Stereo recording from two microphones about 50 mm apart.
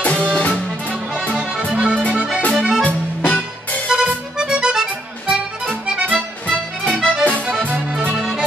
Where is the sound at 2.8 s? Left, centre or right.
Left.